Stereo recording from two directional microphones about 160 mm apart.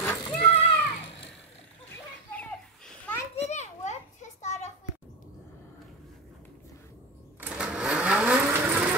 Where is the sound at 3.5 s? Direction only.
45° left (ahead or behind).